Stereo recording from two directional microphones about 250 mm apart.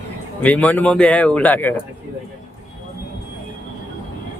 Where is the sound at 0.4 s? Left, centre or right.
Centre.